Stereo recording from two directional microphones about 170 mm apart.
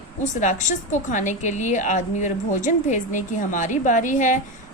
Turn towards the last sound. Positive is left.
turn(degrees=50)  # may be behind; listen again after turning